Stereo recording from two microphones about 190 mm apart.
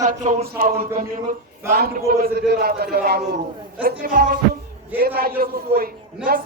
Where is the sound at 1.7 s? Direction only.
55° right (ahead or behind).